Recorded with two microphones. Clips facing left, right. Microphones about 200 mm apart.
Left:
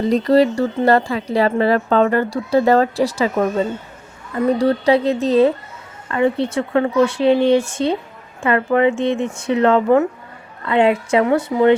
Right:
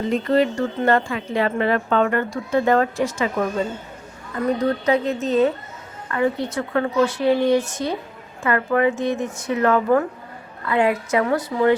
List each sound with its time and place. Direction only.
0.1 s speech: 35° left (ahead or behind)
4.5 s a woman's voice: 30° left (ahead or behind)